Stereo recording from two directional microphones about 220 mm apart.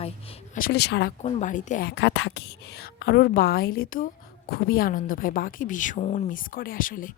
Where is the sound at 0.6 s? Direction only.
45° left (ahead or behind).